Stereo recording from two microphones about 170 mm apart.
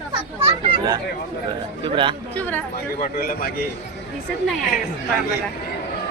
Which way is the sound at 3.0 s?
60° left (ahead or behind).